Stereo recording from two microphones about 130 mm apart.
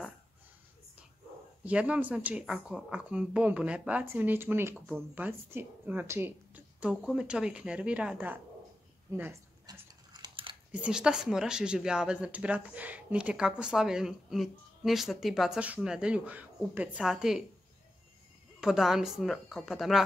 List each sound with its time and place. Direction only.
1.6 s a woman's voice: 10° right (ahead or behind)
9.7 s dog: 35° right (ahead or behind)
10.7 s speech: 5° right (ahead or behind)
18.6 s speech: 5° right (ahead or behind)